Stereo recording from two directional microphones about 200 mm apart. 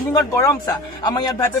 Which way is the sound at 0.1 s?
15° left (ahead or behind).